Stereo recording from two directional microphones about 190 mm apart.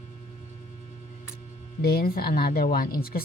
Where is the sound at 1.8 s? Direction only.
55° left (ahead or behind).